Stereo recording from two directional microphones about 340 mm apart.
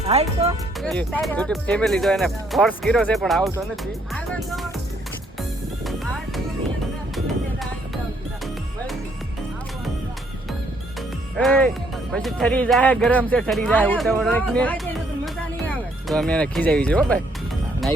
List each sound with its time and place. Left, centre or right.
0.1 s speech: centre
0.8 s speech: centre
5.4 s music: centre
12.1 s speech: centre
16.0 s speech: centre